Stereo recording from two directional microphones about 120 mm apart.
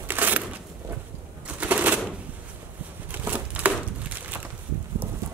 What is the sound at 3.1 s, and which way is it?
Crumpling, 15° right (ahead or behind).